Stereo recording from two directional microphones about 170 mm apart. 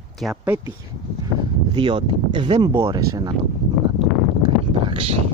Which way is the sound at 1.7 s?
30° right (ahead or behind).